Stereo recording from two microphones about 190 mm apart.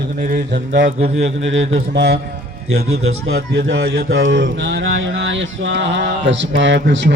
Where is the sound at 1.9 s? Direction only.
60° right (ahead or behind).